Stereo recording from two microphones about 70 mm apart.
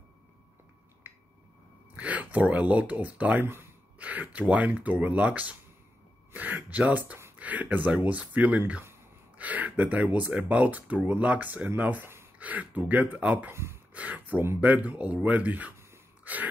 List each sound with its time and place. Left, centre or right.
1.0 s finger snapping: right
2.0 s speech: right
13.5 s speech: right
13.9 s a sound: right
14.6 s speech: right
16.3 s a sound: right